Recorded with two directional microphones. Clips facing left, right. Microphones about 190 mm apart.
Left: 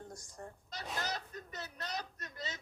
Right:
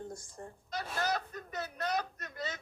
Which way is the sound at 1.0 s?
50° right (ahead or behind).